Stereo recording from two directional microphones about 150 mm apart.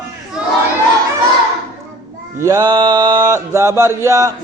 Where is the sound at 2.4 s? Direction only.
20° right (ahead or behind).